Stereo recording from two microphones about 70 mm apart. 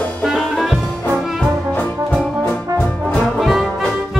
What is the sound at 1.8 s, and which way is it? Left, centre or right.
Music, centre.